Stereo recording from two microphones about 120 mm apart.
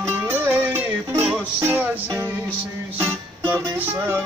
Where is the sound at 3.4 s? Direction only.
15° right (ahead or behind).